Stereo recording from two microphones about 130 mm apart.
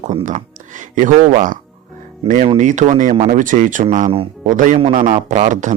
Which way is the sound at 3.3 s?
90° right.